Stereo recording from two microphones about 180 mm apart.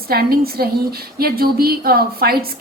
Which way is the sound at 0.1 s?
60° right (ahead or behind).